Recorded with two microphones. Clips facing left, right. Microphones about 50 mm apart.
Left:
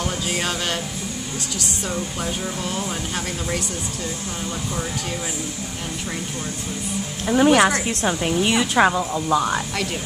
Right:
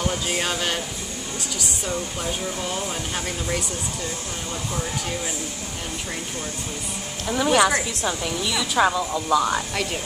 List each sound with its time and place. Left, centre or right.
0.0 s speech: centre
1.9 s speech: centre
7.2 s a woman's voice: left
7.8 s a woman's voice: left
8.7 s a woman's voice: left
9.1 s speech: centre